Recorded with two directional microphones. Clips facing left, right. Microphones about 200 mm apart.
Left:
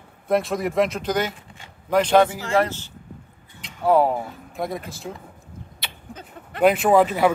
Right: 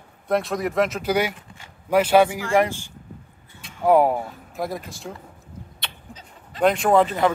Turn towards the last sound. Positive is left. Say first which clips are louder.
# left 1 dB
turn(degrees=5)  # may be behind; listen again after turning